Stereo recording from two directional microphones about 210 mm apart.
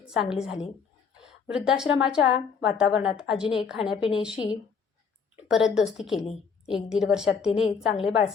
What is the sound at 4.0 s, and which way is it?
Speech, 25° left (ahead or behind).